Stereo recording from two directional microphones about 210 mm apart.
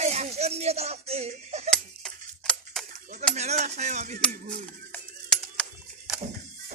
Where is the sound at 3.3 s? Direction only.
30° right (ahead or behind).